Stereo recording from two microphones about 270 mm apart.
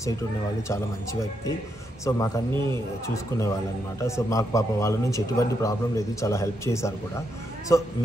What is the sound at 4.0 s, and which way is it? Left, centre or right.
Speech, centre.